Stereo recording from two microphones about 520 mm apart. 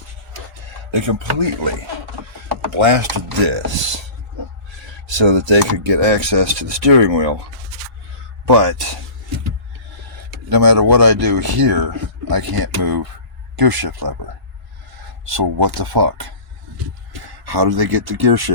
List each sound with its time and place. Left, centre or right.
0.9 s speech: right
2.7 s speech: right
5.1 s speech: right
10.5 s speech: right
15.3 s speech: right
17.4 s speech: right